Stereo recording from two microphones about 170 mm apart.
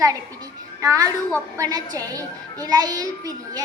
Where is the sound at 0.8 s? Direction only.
20° right (ahead or behind).